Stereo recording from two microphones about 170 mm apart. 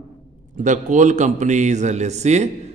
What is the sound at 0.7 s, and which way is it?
A man's voice, 45° right (ahead or behind).